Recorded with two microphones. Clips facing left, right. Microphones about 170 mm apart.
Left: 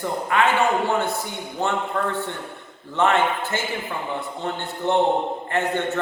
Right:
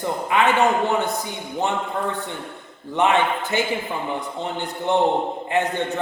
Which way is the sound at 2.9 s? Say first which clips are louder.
Right 1 dB; 15° right (ahead or behind).